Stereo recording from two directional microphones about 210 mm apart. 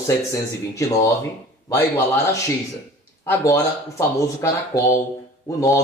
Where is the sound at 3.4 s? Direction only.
15° left (ahead or behind).